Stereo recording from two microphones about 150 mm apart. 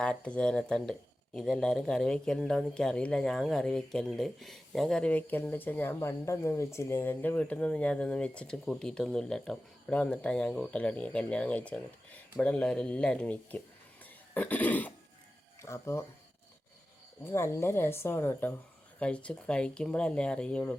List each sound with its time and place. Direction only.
0.0 s speech: 5° left (ahead or behind)
14.0 s cough: 10° left (ahead or behind)
15.6 s speech: 20° left (ahead or behind)
17.2 s speech: 15° left (ahead or behind)